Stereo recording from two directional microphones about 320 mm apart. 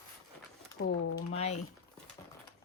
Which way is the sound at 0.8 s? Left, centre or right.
Left.